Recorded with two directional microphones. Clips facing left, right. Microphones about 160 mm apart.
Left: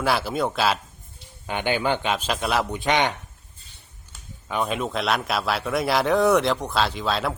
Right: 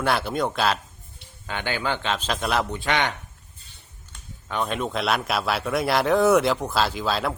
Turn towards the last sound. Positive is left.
turn(degrees=0)  # may be behind; listen again after turning